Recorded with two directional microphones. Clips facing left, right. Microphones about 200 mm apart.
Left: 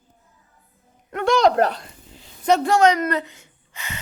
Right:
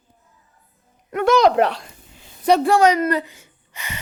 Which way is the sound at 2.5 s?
10° right (ahead or behind).